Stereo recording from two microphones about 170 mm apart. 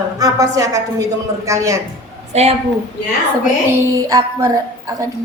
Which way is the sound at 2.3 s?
40° right (ahead or behind).